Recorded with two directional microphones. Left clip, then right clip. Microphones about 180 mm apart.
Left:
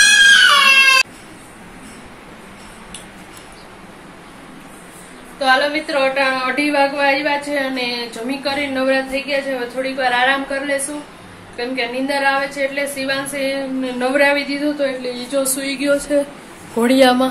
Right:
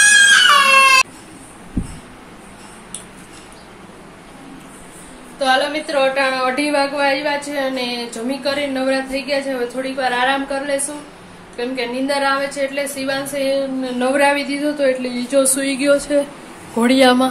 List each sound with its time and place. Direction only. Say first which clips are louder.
0.1 s a sound: left 1 dB; 10° right (ahead or behind)
5.4 s a woman's voice: left 1 dB; 10° right (ahead or behind)
13.9 s a woman's voice: even; 15° right (ahead or behind)
15.0 s speech: right 3 dB; 40° right (ahead or behind)
15.9 s a woman's voice: right 2 dB; 25° right (ahead or behind)
16.7 s a woman's voice: even; 10° right (ahead or behind)